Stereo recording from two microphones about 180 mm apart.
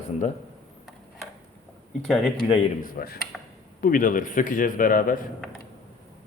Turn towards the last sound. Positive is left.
turn(degrees=50)  # may be behind; listen again after turning